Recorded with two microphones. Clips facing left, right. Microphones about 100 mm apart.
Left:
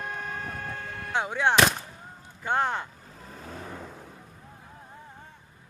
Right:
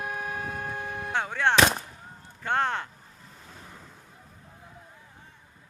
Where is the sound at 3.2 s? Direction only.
65° left (ahead or behind).